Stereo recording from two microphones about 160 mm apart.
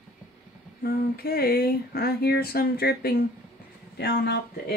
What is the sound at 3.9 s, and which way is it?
Speech, 90° left.